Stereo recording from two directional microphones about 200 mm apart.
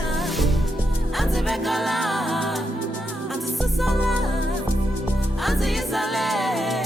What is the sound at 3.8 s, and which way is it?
Music, centre (ahead or behind).